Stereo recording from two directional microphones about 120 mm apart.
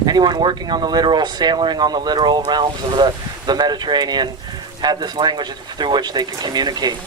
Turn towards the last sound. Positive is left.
turn(degrees=-35)  # may be behind; listen again after turning